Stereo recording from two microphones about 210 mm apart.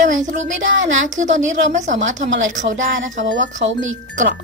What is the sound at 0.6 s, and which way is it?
Speech, 65° right (ahead or behind).